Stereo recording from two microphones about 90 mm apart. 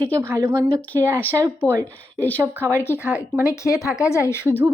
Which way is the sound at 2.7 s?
25° left (ahead or behind).